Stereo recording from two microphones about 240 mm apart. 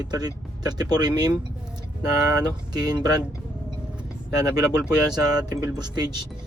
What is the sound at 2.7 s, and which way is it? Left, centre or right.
Speech, centre.